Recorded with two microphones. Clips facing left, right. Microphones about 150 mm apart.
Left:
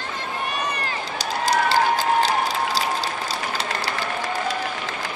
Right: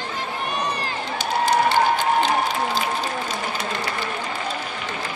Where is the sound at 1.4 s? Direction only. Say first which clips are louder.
Right 1 dB; 35° left (ahead or behind).